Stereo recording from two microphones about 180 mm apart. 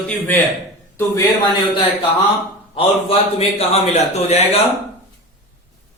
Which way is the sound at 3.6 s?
35° left (ahead or behind).